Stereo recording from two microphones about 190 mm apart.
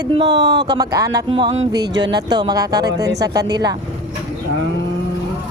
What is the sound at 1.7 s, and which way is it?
Speech, 60° right (ahead or behind).